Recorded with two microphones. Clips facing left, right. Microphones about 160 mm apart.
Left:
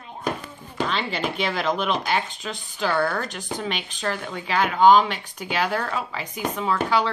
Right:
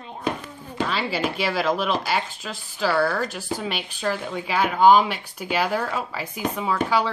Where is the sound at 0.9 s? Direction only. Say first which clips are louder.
Right 1 dB; 5° right (ahead or behind).